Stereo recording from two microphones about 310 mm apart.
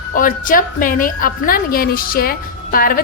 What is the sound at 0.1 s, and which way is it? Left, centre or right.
A woman's voice, left.